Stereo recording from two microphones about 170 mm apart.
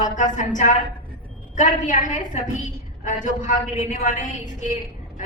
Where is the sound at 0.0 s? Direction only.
45° left (ahead or behind).